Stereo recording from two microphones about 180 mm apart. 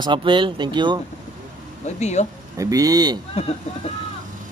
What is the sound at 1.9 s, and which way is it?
Speech, 40° left (ahead or behind).